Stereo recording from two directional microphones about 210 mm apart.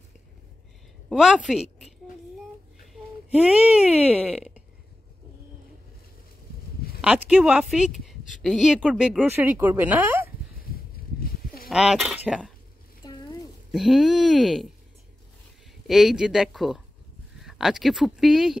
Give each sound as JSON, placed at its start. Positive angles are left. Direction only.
{"t": 1.0, "sound": "a woman's voice", "side_deg": -5}
{"t": 3.3, "sound": "a woman's voice", "side_deg": -5}
{"t": 7.0, "sound": "a woman's voice", "side_deg": -5}
{"t": 11.2, "sound": "honk", "side_deg": 45}
{"t": 11.7, "sound": "a woman's voice", "side_deg": 0}
{"t": 13.0, "sound": "a sound", "side_deg": 20}
{"t": 13.7, "sound": "a woman's voice", "side_deg": 0}
{"t": 15.9, "sound": "a woman's voice", "side_deg": 0}